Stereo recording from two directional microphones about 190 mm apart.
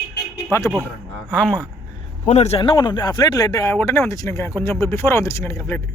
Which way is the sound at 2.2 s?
35° left (ahead or behind).